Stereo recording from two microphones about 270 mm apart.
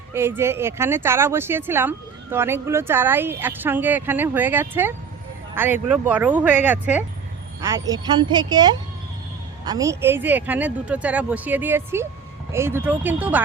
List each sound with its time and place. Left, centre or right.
0.1 s speech: centre